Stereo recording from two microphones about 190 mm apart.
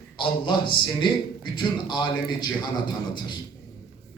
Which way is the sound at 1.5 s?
25° left (ahead or behind).